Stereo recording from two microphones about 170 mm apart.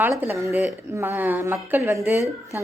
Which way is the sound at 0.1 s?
5° right (ahead or behind).